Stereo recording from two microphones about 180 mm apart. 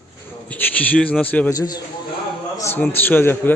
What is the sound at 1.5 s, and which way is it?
A man's voice, 20° left (ahead or behind).